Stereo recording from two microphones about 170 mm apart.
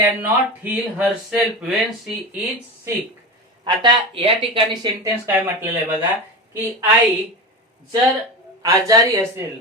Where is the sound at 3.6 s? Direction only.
30° right (ahead or behind).